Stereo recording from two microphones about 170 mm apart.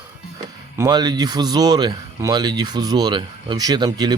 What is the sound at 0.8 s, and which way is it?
Speech, 25° right (ahead or behind).